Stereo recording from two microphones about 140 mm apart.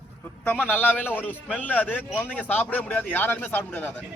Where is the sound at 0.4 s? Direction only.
10° left (ahead or behind).